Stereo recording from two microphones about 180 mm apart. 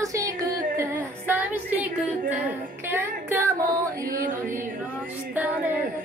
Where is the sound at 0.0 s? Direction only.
20° right (ahead or behind).